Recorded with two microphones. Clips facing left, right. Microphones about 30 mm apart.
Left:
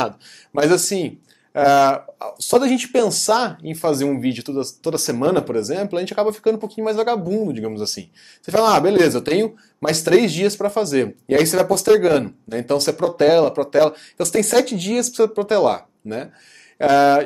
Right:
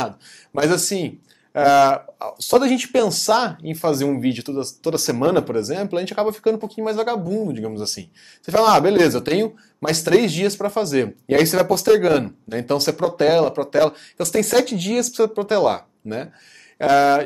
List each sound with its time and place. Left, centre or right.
0.6 s speech: centre
4.8 s speech: centre
8.5 s speech: centre